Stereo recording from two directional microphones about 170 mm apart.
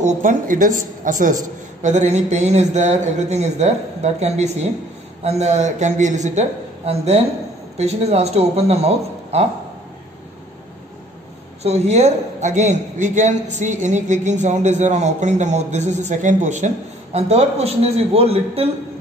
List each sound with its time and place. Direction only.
0.0 s a man's voice: 50° right (ahead or behind)
11.6 s a man's voice: 40° right (ahead or behind)